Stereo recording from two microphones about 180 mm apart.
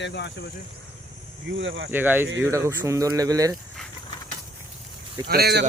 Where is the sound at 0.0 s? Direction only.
75° left (ahead or behind).